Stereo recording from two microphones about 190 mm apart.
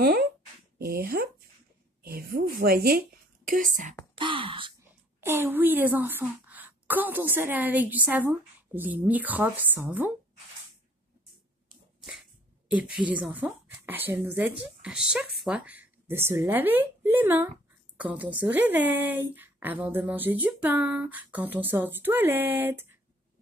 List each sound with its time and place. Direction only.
0.0 s a woman's voice: 55° right (ahead or behind)
4.1 s a sound: 25° right (ahead or behind)
5.2 s a woman's voice: 10° right (ahead or behind)
12.0 s a woman's voice: 5° right (ahead or behind)